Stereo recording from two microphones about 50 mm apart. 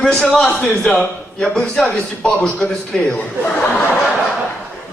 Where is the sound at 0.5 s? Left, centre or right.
Left.